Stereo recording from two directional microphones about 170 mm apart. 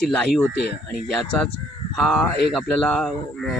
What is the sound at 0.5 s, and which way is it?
Speech, 75° left (ahead or behind).